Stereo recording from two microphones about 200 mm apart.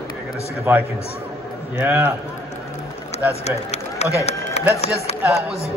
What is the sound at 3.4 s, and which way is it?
Speech, 30° left (ahead or behind).